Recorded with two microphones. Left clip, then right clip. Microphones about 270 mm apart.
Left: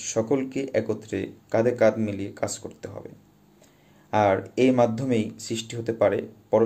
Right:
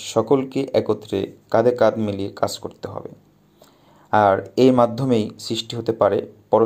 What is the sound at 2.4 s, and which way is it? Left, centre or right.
Speech, centre.